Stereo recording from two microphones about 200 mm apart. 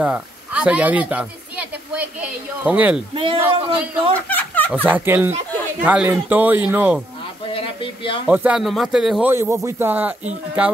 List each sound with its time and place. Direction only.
0.0 s speech: 5° right (ahead or behind)
3.2 s a man's voice: 25° right (ahead or behind)
4.3 s a sound: 10° left (ahead or behind)
4.8 s a man's voice: 10° right (ahead or behind)
7.4 s a sound: 25° left (ahead or behind)
8.3 s speech: 5° right (ahead or behind)
9.3 s a man's voice: 15° right (ahead or behind)